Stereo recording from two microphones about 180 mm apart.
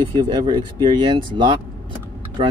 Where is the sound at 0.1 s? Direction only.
25° right (ahead or behind).